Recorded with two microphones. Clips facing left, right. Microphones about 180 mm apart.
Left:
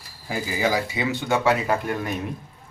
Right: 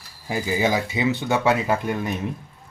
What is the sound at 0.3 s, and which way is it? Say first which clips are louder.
Speech: right 2 dB; 20° right (ahead or behind).